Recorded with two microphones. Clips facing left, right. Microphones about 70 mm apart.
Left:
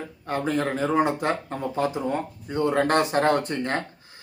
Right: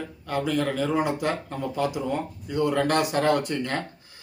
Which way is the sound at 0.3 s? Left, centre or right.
Left.